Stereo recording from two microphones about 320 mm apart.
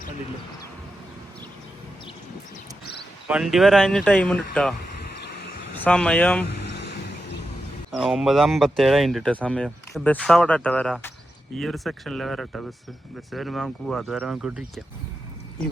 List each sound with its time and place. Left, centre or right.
2.8 s a sound: left
3.2 s speech: centre
5.8 s speech: centre
7.9 s speech: centre